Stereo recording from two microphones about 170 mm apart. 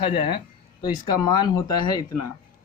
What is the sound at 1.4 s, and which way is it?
Speech, 25° left (ahead or behind).